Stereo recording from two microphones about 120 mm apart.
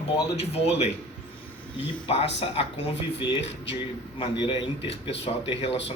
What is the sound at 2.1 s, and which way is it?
Speech, 60° left (ahead or behind).